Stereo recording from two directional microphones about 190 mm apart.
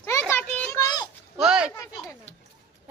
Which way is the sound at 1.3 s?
5° right (ahead or behind).